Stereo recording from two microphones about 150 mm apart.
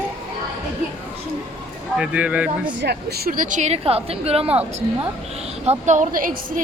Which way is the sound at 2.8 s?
90° right.